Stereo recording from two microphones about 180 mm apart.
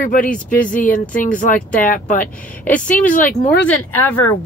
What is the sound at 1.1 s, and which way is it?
Speech, 50° left (ahead or behind).